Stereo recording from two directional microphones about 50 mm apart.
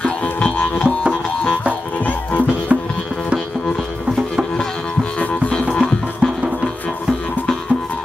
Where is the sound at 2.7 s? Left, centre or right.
Right.